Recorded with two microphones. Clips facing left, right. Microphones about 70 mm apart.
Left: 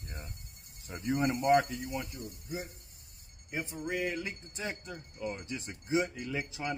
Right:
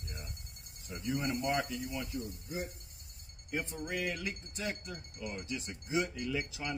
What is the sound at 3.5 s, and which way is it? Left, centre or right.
Speech, centre.